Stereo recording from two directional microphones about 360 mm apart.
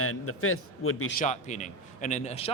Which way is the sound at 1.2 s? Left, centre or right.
Centre.